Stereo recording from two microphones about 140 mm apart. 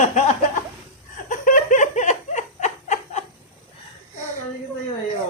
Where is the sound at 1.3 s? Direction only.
70° left (ahead or behind).